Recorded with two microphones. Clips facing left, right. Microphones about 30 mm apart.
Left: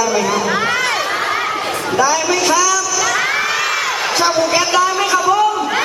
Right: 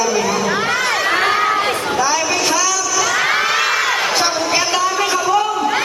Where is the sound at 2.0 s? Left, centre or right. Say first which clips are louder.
Left 3 dB; centre.